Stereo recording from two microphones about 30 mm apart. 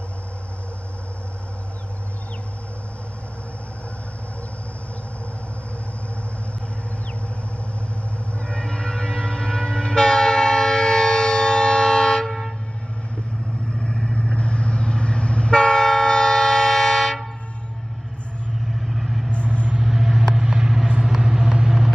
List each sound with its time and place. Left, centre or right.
8.4 s train: left
13.7 s vehicle: centre
14.1 s train: left; by 17.3 s centre
18.6 s vehicle: centre
19.4 s vehicle: right
19.9 s vehicle: centre